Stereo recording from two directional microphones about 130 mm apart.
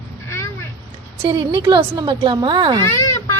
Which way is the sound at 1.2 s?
40° right (ahead or behind).